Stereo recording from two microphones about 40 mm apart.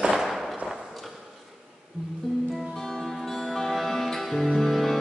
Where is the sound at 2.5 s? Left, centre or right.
Centre.